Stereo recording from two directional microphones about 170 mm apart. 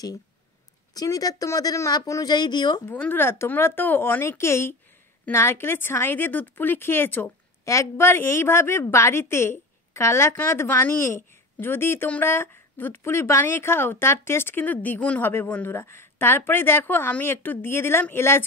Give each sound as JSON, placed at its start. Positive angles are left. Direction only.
{"t": 0.9, "sound": "speech", "side_deg": 20}
{"t": 2.9, "sound": "speech", "side_deg": 10}